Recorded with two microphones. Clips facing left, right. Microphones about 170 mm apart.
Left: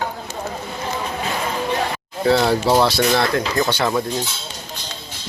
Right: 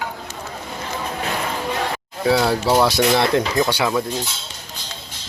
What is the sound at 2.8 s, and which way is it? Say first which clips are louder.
Speech: right 1 dB; 15° right (ahead or behind).